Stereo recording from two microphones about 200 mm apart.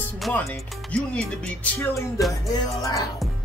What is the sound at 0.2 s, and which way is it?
Speech, centre (ahead or behind).